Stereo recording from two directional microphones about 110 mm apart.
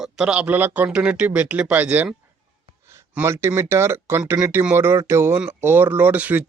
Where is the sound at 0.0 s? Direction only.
10° right (ahead or behind).